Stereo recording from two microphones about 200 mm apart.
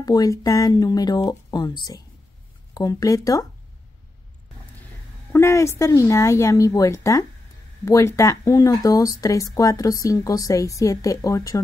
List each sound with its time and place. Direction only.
0.0 s speech: 20° left (ahead or behind)
5.3 s speech: 15° left (ahead or behind)